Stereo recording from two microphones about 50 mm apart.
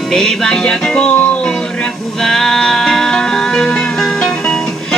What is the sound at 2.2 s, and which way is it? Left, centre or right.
Music, centre.